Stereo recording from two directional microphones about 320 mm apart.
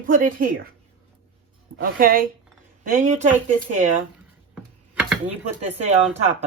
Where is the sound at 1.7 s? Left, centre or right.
Right.